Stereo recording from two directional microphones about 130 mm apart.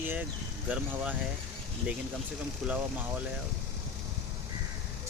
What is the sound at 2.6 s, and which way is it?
Speech, centre (ahead or behind).